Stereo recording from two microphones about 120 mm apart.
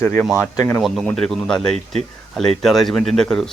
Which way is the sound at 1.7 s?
65° right (ahead or behind).